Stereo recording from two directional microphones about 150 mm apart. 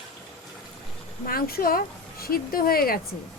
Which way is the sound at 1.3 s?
80° left.